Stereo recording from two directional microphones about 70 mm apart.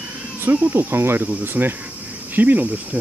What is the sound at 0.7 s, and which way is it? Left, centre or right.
Speech, right.